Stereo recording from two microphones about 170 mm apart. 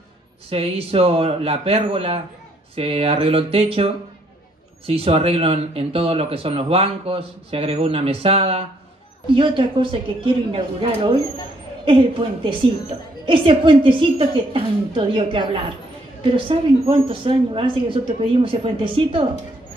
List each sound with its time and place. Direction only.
0.5 s speech: 35° right (ahead or behind)